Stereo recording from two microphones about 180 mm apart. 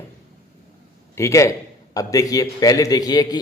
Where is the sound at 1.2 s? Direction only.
15° left (ahead or behind).